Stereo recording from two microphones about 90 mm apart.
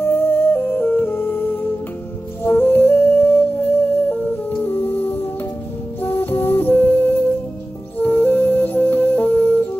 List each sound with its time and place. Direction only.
0.0 s music: 25° left (ahead or behind)